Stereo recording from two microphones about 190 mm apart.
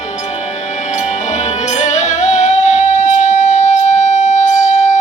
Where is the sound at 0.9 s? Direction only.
35° left (ahead or behind).